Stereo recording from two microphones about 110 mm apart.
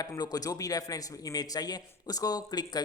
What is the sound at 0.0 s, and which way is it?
A man's voice, 35° left (ahead or behind).